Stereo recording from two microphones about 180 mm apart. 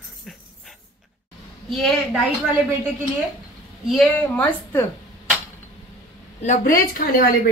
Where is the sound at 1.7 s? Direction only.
Centre (ahead or behind).